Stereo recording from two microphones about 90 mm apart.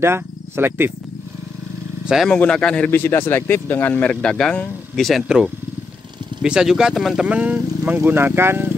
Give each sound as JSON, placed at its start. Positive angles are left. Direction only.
{"t": 0.0, "sound": "speech", "side_deg": -25}
{"t": 2.2, "sound": "speech", "side_deg": 10}
{"t": 2.9, "sound": "speech", "side_deg": 25}
{"t": 6.4, "sound": "speech", "side_deg": -10}
{"t": 7.2, "sound": "speech", "side_deg": -15}